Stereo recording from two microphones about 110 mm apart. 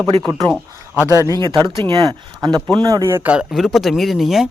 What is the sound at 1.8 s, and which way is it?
Speech, 40° right (ahead or behind).